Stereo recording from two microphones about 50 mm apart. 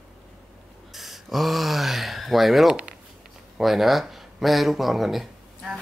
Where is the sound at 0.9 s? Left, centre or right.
Centre.